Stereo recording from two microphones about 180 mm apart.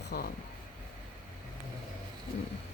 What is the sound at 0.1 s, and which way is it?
Speech, 60° left (ahead or behind).